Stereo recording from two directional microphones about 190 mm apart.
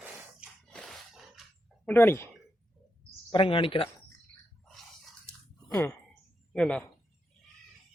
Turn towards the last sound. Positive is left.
turn(degrees=5)  # may be behind; listen again after turning